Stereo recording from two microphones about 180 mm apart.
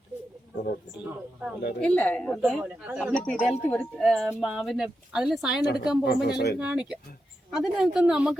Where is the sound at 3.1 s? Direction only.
5° left (ahead or behind).